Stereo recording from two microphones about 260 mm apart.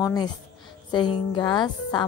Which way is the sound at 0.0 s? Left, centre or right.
Centre.